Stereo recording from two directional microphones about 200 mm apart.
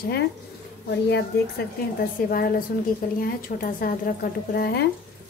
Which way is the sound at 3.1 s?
45° left (ahead or behind).